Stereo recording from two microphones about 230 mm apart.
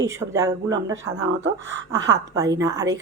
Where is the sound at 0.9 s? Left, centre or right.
Right.